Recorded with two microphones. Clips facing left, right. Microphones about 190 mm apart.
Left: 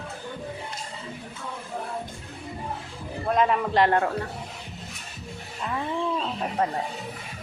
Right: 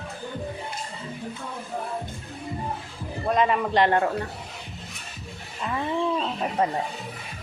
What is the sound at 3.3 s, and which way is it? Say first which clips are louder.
Speech: even; centre (ahead or behind).